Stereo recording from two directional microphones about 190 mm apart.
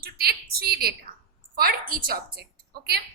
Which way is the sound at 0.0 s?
55° right (ahead or behind).